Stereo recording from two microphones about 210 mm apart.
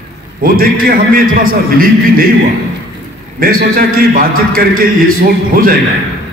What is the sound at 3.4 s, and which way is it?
A man's voice, 45° right (ahead or behind).